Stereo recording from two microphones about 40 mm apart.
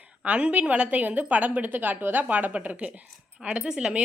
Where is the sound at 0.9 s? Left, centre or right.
Right.